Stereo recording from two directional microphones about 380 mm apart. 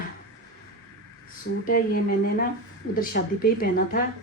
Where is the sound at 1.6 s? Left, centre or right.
Left.